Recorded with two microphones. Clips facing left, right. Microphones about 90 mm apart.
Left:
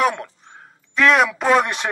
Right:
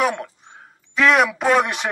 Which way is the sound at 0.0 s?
Centre (ahead or behind).